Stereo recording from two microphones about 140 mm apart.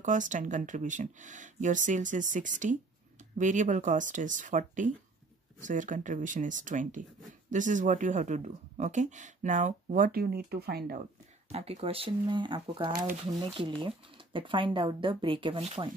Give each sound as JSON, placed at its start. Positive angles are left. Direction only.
{"t": 0.0, "sound": "speech", "side_deg": -65}
{"t": 11.4, "sound": "speech", "side_deg": -45}